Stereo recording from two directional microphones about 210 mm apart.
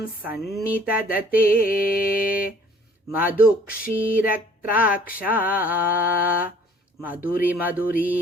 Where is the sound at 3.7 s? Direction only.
45° left (ahead or behind).